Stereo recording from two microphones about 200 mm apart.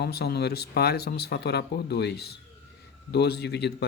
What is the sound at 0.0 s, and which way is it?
Speech, 55° left (ahead or behind).